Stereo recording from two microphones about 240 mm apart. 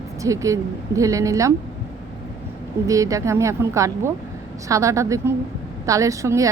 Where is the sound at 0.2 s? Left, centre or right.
Centre.